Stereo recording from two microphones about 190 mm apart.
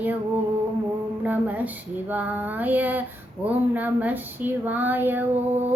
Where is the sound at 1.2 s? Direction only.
10° right (ahead or behind).